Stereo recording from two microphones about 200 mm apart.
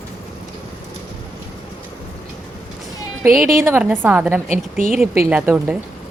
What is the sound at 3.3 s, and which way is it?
A woman's voice, centre (ahead or behind).